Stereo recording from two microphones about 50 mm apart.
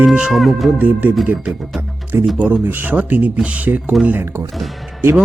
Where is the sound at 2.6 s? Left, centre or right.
Right.